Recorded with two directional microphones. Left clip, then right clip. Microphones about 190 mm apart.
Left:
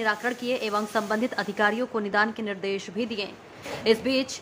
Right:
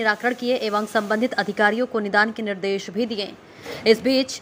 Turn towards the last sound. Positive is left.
turn(degrees=-20)  # may be behind; listen again after turning